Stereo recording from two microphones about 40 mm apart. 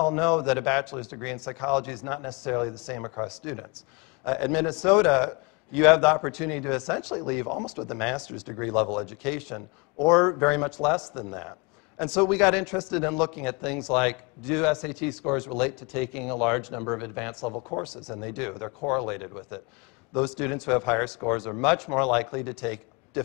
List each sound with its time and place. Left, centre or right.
0.0 s speech: centre